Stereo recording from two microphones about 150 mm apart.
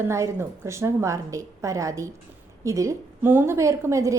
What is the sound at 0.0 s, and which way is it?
A woman's voice, 15° right (ahead or behind).